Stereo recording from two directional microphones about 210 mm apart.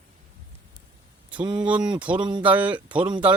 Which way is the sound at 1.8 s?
20° right (ahead or behind).